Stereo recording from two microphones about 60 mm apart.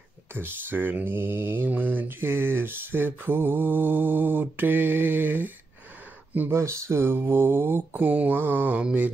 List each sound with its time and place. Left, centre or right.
0.3 s mantra: right
6.5 s speech: right
7.2 s mantra: right